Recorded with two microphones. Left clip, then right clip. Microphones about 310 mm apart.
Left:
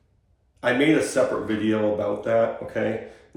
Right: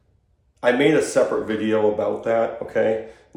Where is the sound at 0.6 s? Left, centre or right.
Right.